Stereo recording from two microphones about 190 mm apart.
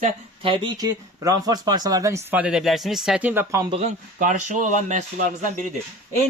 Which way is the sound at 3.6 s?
30° right (ahead or behind).